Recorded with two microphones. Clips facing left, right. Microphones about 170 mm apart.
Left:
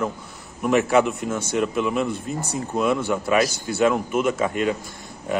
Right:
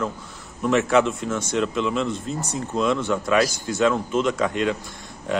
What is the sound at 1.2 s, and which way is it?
Speech, 30° left (ahead or behind).